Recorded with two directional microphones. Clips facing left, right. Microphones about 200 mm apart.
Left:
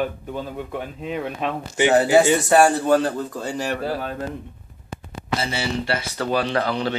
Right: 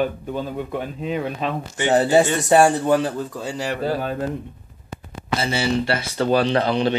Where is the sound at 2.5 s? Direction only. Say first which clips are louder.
Right 2 dB; 20° right (ahead or behind).